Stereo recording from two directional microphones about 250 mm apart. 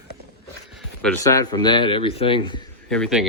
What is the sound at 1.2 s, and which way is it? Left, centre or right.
Speech, centre.